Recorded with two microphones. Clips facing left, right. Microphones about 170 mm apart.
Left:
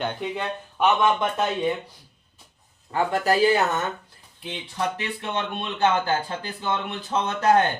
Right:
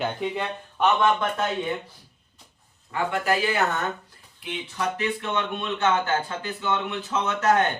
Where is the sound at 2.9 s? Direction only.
35° left (ahead or behind).